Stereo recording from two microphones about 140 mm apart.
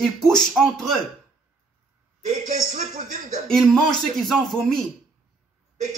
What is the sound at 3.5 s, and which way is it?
Speech, 5° left (ahead or behind).